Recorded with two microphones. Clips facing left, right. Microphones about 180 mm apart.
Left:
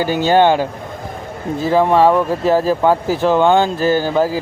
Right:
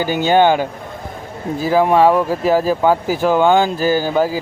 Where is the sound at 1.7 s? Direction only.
5° right (ahead or behind).